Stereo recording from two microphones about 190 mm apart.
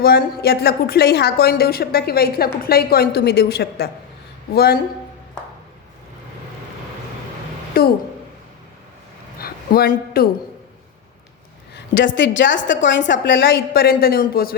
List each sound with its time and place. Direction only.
0.0 s a woman's voice: 55° left (ahead or behind)
7.8 s a woman's voice: 50° left (ahead or behind)
9.4 s a sound: 50° left (ahead or behind)
11.9 s a woman's voice: 75° left (ahead or behind); by 14.5 s 50° left (ahead or behind)